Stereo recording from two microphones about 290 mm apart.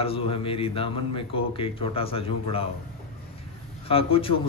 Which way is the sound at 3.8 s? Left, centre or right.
Centre.